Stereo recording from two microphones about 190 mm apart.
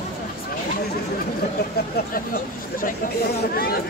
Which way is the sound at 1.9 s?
50° left (ahead or behind).